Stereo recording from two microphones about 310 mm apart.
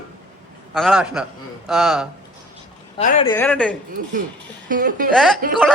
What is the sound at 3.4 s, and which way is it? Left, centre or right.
Speech, centre.